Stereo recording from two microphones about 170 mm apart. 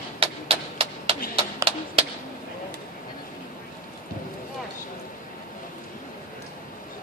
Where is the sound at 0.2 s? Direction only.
30° right (ahead or behind).